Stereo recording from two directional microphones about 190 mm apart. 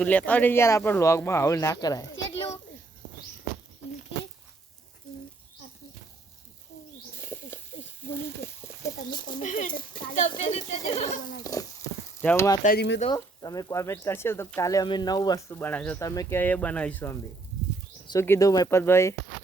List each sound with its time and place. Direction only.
0.0 s speech: 10° left (ahead or behind)
7.2 s snake: 10° left (ahead or behind)
8.4 s frying: 15° left (ahead or behind)
8.8 s a sound: 20° left (ahead or behind)
9.4 s speech: 40° left (ahead or behind)
11.5 s speech: 20° left (ahead or behind)
12.2 s speech: 10° left (ahead or behind)
12.6 s speech: 60° left (ahead or behind)
13.1 s speech: 20° left (ahead or behind)